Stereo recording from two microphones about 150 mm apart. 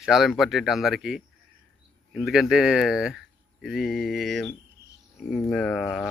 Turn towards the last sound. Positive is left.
turn(degrees=5)  # may be behind; listen again after turning